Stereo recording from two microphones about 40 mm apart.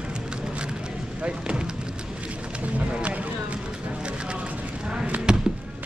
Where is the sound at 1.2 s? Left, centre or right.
Right.